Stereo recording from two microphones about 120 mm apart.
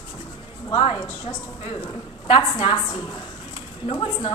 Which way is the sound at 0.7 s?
40° left (ahead or behind).